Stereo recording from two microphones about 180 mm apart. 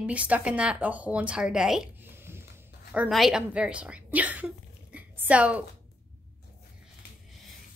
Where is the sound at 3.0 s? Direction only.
Centre (ahead or behind).